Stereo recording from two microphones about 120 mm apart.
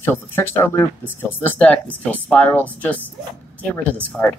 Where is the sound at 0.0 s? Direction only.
20° left (ahead or behind).